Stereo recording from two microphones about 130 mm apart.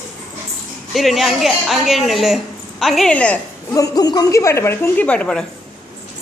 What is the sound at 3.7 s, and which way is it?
A woman's voice, 30° left (ahead or behind).